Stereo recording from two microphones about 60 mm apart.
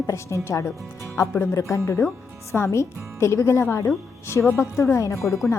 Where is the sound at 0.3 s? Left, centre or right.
Left.